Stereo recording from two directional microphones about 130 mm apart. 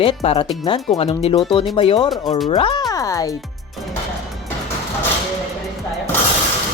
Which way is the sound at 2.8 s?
25° left (ahead or behind).